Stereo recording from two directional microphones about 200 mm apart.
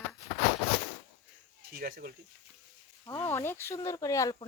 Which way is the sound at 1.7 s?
50° right (ahead or behind).